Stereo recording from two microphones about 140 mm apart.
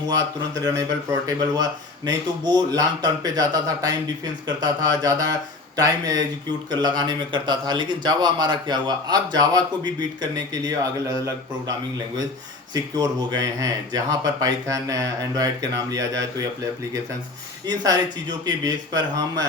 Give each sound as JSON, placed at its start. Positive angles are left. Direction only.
{"t": 0.6, "sound": "speech", "side_deg": -25}
{"t": 12.7, "sound": "speech", "side_deg": -30}
{"t": 17.7, "sound": "speech", "side_deg": -30}